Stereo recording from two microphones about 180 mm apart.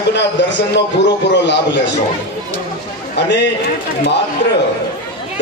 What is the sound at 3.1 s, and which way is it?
Speech, 70° left (ahead or behind).